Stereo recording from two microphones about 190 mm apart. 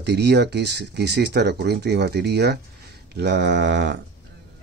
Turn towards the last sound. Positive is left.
turn(degrees=-65)  # may be behind; listen again after turning